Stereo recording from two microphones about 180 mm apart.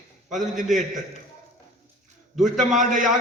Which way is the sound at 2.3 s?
Centre (ahead or behind).